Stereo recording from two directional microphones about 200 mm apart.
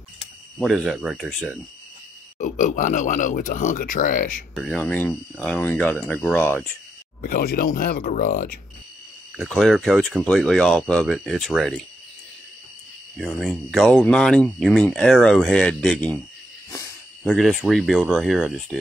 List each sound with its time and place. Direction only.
0.6 s speech: centre (ahead or behind)
2.3 s speech: 40° left (ahead or behind)
4.6 s speech: 5° left (ahead or behind)
7.2 s speech: 45° left (ahead or behind)
9.6 s speech: centre (ahead or behind)
13.2 s speech: centre (ahead or behind)
17.2 s speech: centre (ahead or behind)